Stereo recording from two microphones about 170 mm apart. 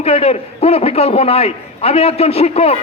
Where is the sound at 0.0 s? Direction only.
35° left (ahead or behind).